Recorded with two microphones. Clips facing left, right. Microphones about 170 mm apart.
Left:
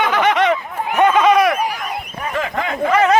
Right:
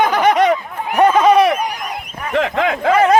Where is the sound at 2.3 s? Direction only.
75° right (ahead or behind).